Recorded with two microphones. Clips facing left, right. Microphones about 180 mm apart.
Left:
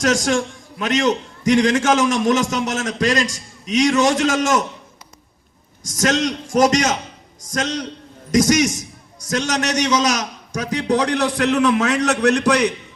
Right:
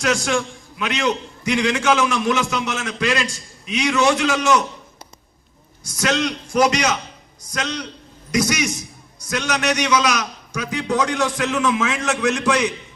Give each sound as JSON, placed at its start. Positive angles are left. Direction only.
{"t": 0.0, "sound": "a man's voice", "side_deg": 40}
{"t": 5.8, "sound": "a man's voice", "side_deg": 45}